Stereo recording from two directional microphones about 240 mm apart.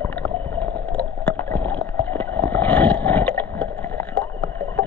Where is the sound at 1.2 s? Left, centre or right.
Centre.